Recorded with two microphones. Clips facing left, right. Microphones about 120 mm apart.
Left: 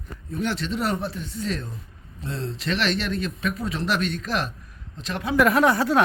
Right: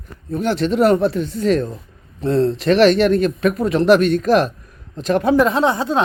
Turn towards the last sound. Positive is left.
turn(degrees=-25)  # may be behind; listen again after turning